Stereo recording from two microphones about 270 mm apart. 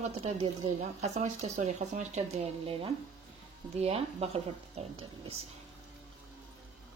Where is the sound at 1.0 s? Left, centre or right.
Right.